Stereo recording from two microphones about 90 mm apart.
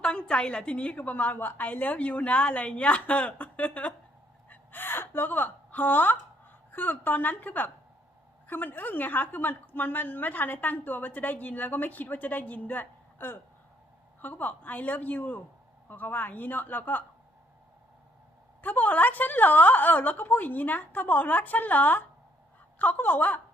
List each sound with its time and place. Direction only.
0.0 s a woman's voice: 10° left (ahead or behind)
18.6 s a woman's voice: 20° left (ahead or behind)